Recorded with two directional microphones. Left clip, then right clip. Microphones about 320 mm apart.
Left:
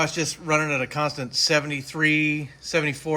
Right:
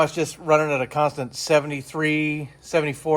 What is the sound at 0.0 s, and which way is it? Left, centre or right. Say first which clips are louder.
Speech: right 3 dB; centre.